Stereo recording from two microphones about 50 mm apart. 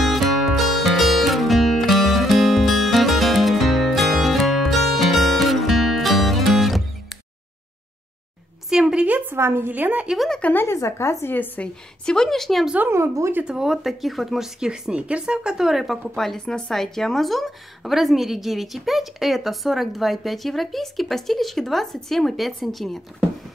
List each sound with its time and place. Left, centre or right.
0.0 s music: centre
8.7 s a sound: centre
9.0 s a sound: right
9.4 s a woman's voice: right
9.7 s speech: right
10.7 s a woman's voice: left
11.3 s a woman's voice: left
11.6 s a woman's voice: centre
12.9 s speech: right
13.5 s speech: centre
13.8 s a woman's voice: centre
14.6 s speech: centre
16.2 s a woman's voice: centre